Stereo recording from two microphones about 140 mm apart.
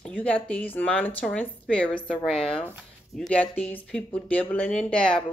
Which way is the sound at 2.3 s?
40° left (ahead or behind).